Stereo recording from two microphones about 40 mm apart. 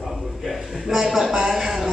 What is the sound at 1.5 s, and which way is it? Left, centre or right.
Speech, centre.